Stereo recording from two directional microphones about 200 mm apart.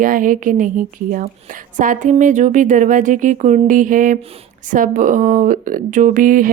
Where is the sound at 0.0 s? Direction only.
40° right (ahead or behind).